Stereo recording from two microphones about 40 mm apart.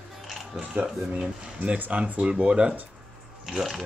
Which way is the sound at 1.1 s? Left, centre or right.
Right.